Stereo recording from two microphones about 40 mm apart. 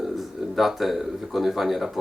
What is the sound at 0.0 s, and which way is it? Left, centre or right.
A man's voice, centre.